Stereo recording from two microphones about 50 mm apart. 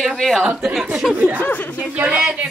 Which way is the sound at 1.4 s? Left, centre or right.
Left.